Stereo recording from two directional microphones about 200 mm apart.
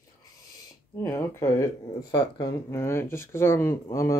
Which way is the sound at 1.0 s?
15° left (ahead or behind).